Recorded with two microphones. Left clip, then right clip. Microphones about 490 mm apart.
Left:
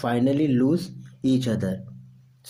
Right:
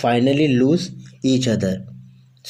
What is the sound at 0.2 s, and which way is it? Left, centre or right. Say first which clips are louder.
Speech: right 5 dB; left.